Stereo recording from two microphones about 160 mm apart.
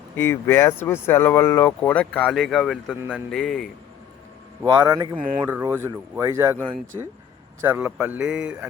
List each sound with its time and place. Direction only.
0.2 s speech: 15° left (ahead or behind)
2.9 s speech: 10° right (ahead or behind)
3.2 s a man's voice: centre (ahead or behind)
4.8 s speech: 25° right (ahead or behind)
5.4 s speech: 10° right (ahead or behind); by 7.1 s 30° right (ahead or behind)
7.6 s speech: 10° right (ahead or behind)